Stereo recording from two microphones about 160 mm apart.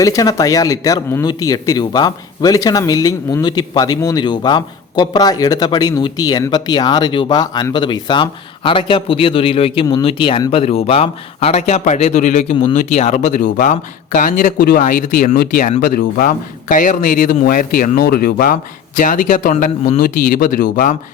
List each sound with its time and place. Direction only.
0.0 s a man's voice: 20° left (ahead or behind); by 20.9 s 60° left (ahead or behind)